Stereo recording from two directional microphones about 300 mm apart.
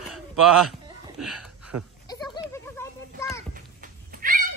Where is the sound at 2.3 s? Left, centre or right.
Centre.